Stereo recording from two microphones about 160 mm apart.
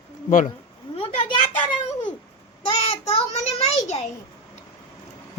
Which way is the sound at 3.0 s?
40° left (ahead or behind).